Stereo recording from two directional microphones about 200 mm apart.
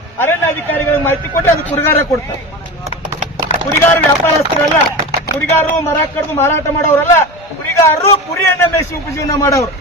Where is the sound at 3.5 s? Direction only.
35° left (ahead or behind).